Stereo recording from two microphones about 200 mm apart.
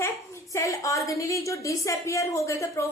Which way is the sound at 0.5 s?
15° left (ahead or behind).